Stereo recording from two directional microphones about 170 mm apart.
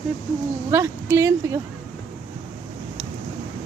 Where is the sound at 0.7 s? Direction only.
15° right (ahead or behind).